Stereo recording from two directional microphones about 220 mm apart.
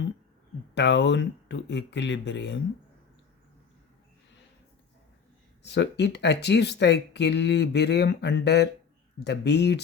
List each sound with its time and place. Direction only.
0.7 s speech: 50° left (ahead or behind)
5.6 s speech: 50° left (ahead or behind)